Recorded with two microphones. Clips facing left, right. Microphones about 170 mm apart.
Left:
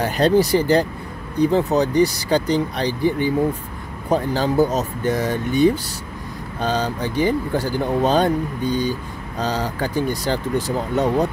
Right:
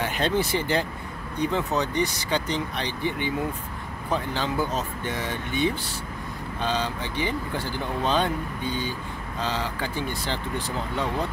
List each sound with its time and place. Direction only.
0.0 s speech: 40° left (ahead or behind)